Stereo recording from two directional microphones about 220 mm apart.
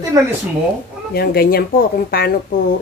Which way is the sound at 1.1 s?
45° left (ahead or behind).